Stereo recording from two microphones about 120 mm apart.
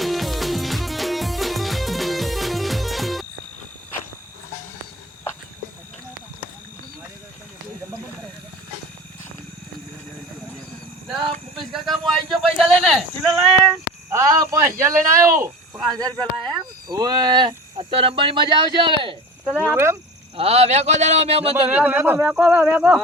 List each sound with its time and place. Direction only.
0.0 s music: centre (ahead or behind)
11.7 s a sound: centre (ahead or behind)
14.1 s a man's voice: 25° right (ahead or behind); by 19.1 s 45° right (ahead or behind)
19.5 s speech: 20° right (ahead or behind)
20.3 s speech: 55° right (ahead or behind)
21.5 s speech: 15° right (ahead or behind)